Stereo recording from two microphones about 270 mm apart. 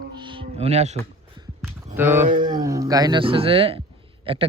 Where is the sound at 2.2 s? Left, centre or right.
Right.